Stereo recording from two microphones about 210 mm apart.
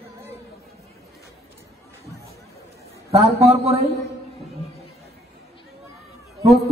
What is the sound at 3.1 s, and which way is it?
Speech, 30° right (ahead or behind).